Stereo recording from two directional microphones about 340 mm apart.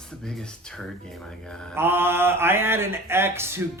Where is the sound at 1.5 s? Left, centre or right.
Centre.